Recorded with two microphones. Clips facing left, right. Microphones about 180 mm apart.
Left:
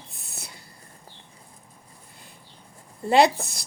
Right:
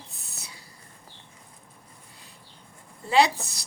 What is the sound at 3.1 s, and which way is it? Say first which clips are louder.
Speech: left 3 dB; 55° left (ahead or behind).